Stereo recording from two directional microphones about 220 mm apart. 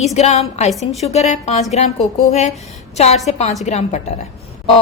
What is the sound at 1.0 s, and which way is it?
A woman's voice, 30° left (ahead or behind).